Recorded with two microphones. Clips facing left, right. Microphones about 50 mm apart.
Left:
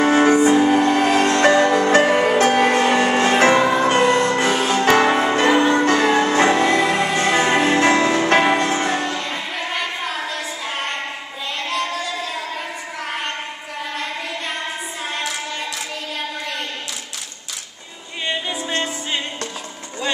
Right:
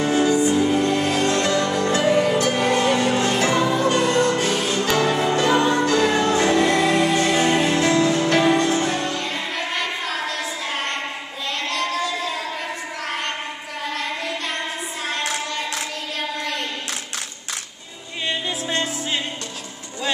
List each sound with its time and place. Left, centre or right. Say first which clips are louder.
0.0 s music: left 4 dB; left
5.9 s music: left 2 dB; left
9.2 s child singing: even; centre
11.7 s a sound: even; centre
18.3 s music: left 1 dB; centre